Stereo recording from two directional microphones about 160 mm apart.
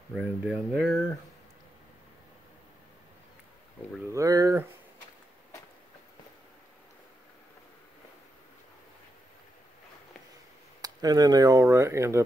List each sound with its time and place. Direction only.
0.1 s speech: 5° right (ahead or behind)
4.1 s speech: 20° right (ahead or behind)
10.8 s speech: 25° right (ahead or behind)